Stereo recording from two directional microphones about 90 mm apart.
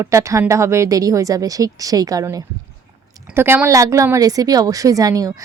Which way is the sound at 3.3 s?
25° right (ahead or behind).